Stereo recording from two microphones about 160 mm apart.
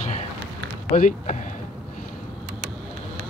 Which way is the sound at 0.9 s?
50° left (ahead or behind).